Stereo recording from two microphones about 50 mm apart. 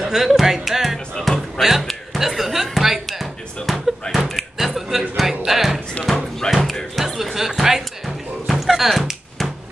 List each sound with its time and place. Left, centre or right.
0.0 s music: centre
1.2 s speech: centre
1.6 s music: centre
2.1 s speech: centre
3.7 s slam: centre
4.1 s a sound: centre
4.4 s a sound: centre
5.4 s music: centre
6.5 s a sound: centre